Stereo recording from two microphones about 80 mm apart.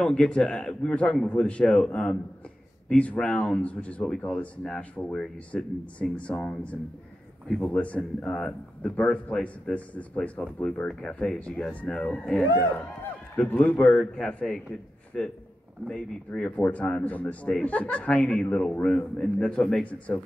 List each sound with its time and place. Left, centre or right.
0.0 s a man's voice: centre
7.4 s a man's voice: centre
7.7 s a man's voice: centre
13.9 s a man's voice: centre
16.3 s a man's voice: centre